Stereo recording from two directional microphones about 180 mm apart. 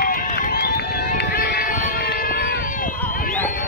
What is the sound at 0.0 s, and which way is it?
Run, 50° left (ahead or behind).